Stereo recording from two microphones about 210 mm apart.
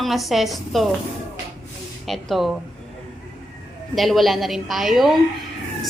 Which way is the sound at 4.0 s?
Centre (ahead or behind).